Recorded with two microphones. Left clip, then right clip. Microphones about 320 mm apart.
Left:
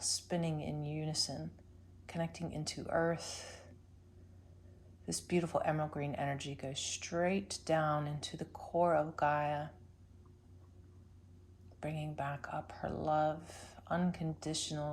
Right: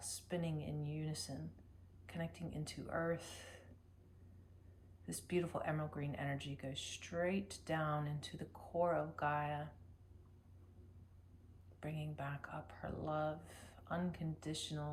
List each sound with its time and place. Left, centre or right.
0.0 s a sound: centre
2.0 s speech: centre
5.0 s speech: centre
11.8 s speech: centre